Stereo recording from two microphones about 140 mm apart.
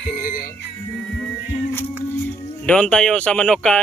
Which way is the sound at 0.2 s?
75° left (ahead or behind).